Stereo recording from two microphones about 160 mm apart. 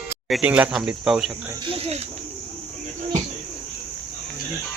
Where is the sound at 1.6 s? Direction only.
35° right (ahead or behind).